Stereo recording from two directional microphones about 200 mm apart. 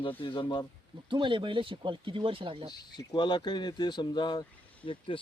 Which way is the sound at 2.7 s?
20° left (ahead or behind).